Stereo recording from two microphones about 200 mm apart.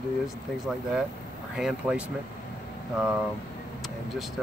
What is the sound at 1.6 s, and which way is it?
Speech, 5° right (ahead or behind).